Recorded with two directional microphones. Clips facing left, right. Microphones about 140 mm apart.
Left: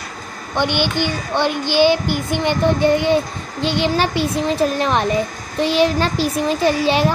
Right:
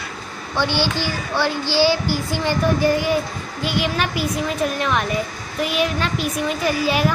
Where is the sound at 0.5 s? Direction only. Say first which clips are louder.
Left 2 dB; 20° left (ahead or behind).